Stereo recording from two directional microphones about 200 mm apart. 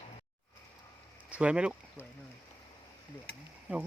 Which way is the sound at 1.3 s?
5° right (ahead or behind).